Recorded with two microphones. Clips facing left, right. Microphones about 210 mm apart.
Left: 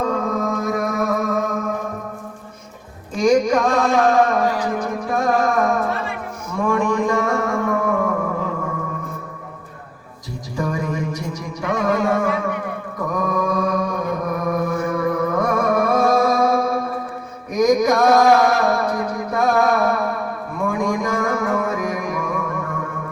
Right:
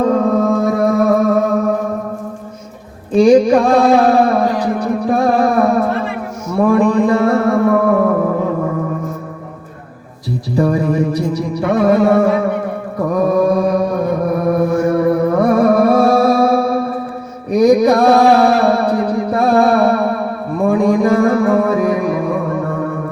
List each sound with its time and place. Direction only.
0.3 s music: 30° right (ahead or behind)
3.1 s music: 35° right (ahead or behind)
10.5 s music: 35° right (ahead or behind)
13.1 s mantra: 35° right (ahead or behind)
17.5 s music: 35° right (ahead or behind)